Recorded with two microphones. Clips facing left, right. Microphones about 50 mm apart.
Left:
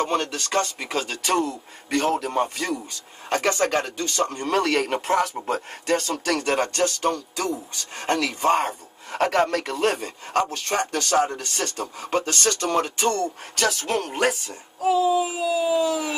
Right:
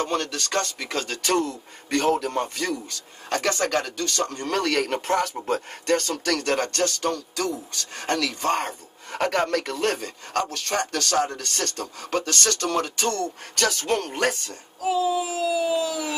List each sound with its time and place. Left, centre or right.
0.0 s speech: centre
13.6 s speech: centre